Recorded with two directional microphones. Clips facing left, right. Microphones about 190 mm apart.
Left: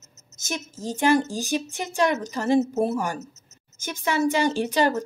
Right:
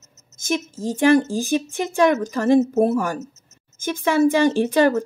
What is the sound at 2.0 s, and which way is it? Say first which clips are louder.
Speech: right 6 dB; 50° right (ahead or behind).